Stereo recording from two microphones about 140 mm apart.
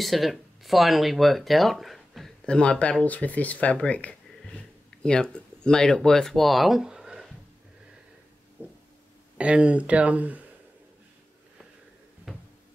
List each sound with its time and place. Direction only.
0.0 s speech: centre (ahead or behind)
8.6 s a sound: 15° right (ahead or behind)
9.4 s speech: 10° right (ahead or behind)
12.3 s cupboard open or close: 5° right (ahead or behind)